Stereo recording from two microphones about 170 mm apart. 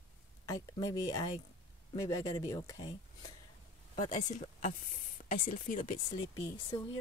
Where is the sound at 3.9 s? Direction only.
45° left (ahead or behind).